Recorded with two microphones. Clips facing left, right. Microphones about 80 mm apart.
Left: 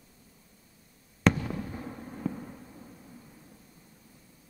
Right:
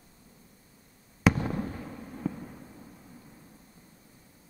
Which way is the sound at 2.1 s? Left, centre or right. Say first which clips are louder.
Even; centre.